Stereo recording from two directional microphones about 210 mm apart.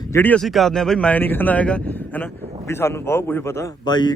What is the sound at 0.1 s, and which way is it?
A man's voice, 10° left (ahead or behind).